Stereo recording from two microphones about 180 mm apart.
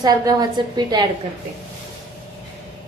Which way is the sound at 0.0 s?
20° right (ahead or behind).